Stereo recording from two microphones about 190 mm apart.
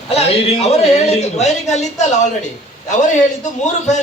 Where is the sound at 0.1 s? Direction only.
35° left (ahead or behind).